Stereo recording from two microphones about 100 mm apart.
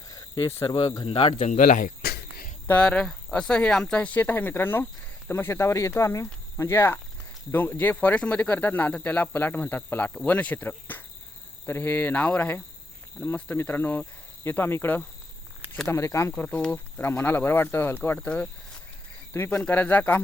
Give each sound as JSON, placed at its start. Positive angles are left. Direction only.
{"t": 0.1, "sound": "speech", "side_deg": 35}
{"t": 1.0, "sound": "a man's voice", "side_deg": 65}
{"t": 2.6, "sound": "speech", "side_deg": 15}
{"t": 16.4, "sound": "speech", "side_deg": 10}
{"t": 19.3, "sound": "speech", "side_deg": 25}